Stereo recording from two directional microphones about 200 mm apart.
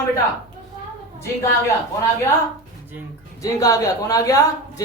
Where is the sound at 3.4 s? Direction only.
15° left (ahead or behind).